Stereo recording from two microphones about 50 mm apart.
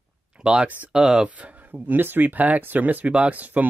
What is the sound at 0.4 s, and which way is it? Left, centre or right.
Speech, centre.